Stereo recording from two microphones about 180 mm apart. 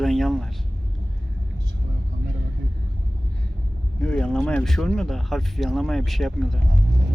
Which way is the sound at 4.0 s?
5° left (ahead or behind).